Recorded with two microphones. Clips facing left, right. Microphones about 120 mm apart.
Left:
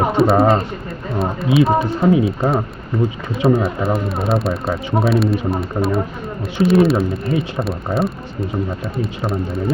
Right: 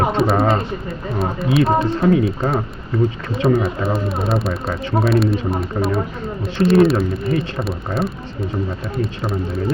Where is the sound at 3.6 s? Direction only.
Centre (ahead or behind).